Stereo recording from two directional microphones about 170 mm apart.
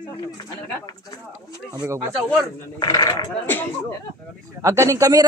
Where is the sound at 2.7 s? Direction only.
20° left (ahead or behind).